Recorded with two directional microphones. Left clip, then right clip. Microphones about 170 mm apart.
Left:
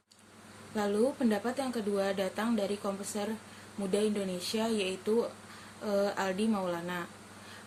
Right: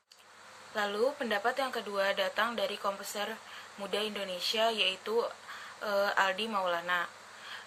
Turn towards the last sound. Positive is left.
turn(degrees=-10)  # may be behind; listen again after turning